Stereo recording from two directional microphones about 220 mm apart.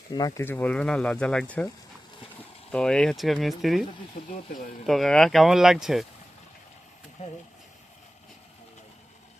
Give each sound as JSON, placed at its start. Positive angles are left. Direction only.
{"t": 0.1, "sound": "speech", "side_deg": 15}
{"t": 2.7, "sound": "speech", "side_deg": 5}
{"t": 4.2, "sound": "speech", "side_deg": 40}
{"t": 4.9, "sound": "speech", "side_deg": 0}
{"t": 7.2, "sound": "speech", "side_deg": 30}